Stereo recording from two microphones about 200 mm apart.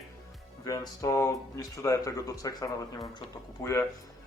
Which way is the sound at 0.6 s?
15° left (ahead or behind).